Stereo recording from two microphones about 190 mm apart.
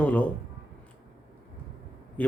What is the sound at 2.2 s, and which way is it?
Speech, 10° left (ahead or behind).